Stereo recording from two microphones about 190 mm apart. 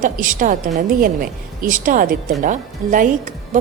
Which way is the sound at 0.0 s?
45° right (ahead or behind).